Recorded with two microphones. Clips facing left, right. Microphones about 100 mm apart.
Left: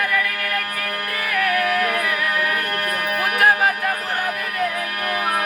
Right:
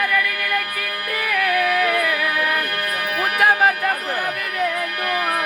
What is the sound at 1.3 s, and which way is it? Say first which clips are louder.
Music: right 1 dB; centre (ahead or behind).